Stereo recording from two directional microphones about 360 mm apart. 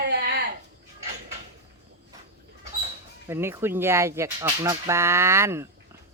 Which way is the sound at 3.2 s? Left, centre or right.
Centre.